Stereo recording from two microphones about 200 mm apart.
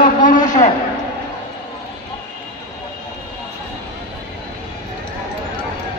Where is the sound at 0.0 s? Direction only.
40° left (ahead or behind).